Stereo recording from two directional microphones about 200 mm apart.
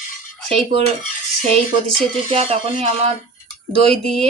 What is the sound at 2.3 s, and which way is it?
Speech, 30° right (ahead or behind).